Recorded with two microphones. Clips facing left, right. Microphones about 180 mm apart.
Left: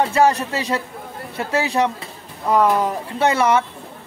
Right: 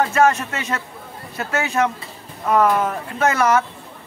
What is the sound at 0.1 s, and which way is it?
A man's voice, 35° left (ahead or behind).